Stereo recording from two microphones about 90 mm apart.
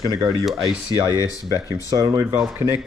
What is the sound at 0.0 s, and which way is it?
Speech, 50° right (ahead or behind).